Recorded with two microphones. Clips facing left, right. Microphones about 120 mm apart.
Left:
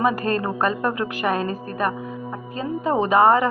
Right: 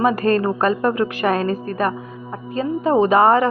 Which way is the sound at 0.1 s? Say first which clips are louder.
Right 5 dB; 15° left (ahead or behind).